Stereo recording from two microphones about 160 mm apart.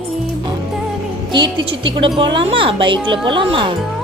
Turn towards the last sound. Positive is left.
turn(degrees=-35)  # may be behind; listen again after turning